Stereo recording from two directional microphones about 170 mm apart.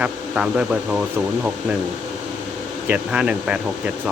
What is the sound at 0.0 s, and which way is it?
Speech, 5° right (ahead or behind).